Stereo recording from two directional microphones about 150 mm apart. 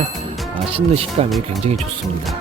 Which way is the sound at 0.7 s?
40° right (ahead or behind).